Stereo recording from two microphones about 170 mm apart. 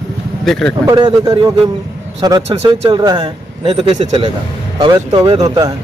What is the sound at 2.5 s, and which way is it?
Speech, 40° right (ahead or behind).